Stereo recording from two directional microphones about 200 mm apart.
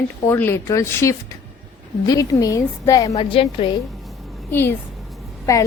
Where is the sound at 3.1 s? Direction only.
30° left (ahead or behind).